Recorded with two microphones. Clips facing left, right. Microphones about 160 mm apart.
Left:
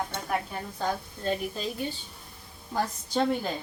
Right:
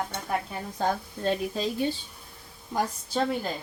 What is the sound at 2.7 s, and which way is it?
Speech, 10° right (ahead or behind).